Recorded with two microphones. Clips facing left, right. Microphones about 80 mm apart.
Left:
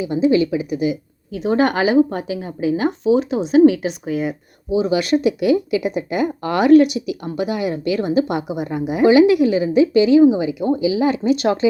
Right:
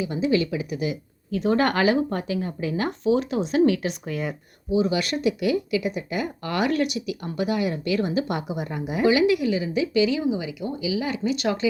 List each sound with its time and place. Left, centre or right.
0.0 s speech: centre
1.4 s speech: centre
9.0 s speech: left